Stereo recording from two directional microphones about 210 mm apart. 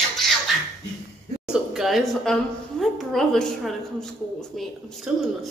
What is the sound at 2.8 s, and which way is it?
Speech, centre (ahead or behind).